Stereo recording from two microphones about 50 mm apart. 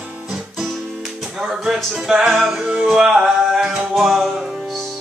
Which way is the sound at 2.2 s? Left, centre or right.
Centre.